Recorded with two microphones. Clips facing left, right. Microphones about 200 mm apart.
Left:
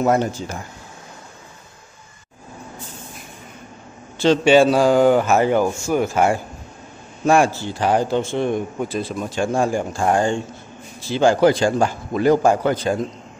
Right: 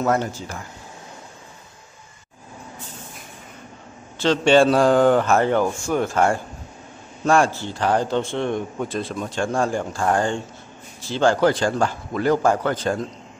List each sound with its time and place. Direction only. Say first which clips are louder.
0.0 s a man's voice: left 3 dB; 15° left (ahead or behind)
4.2 s a man's voice: left 2 dB; 10° left (ahead or behind)